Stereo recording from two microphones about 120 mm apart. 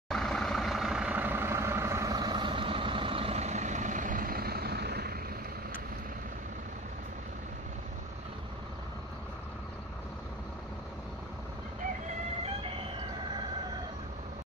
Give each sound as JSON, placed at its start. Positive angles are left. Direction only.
{"t": 0.1, "sound": "vehicle", "side_deg": 5}